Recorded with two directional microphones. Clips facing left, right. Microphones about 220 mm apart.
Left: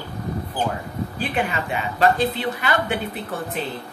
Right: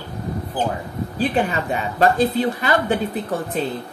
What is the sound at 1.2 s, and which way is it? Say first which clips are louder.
Speech: right 5 dB; 35° right (ahead or behind).